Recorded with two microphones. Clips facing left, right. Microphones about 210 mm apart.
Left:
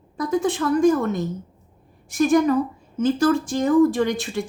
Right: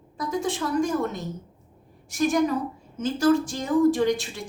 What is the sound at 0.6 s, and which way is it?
Speech, 75° left (ahead or behind).